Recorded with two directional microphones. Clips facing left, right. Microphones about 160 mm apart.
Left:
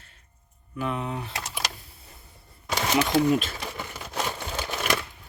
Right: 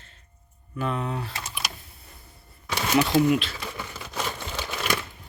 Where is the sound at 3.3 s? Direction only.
45° left (ahead or behind).